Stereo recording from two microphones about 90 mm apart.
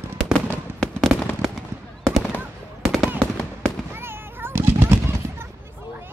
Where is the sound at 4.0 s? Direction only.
25° right (ahead or behind).